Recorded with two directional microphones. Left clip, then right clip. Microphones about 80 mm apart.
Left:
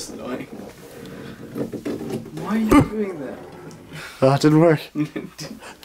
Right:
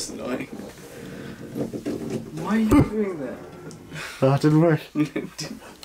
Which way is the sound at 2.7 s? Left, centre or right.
Centre.